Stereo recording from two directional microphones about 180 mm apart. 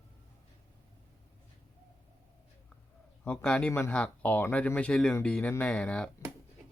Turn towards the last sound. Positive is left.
turn(degrees=5)  # may be behind; listen again after turning